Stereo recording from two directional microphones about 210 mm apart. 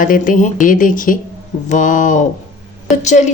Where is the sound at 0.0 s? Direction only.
40° left (ahead or behind).